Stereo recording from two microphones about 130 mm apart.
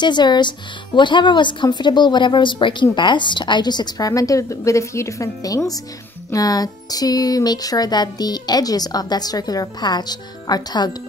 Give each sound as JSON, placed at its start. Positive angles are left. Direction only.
{"t": 0.0, "sound": "speech", "side_deg": 35}